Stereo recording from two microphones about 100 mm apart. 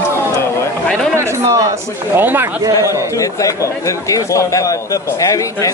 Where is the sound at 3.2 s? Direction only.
35° left (ahead or behind).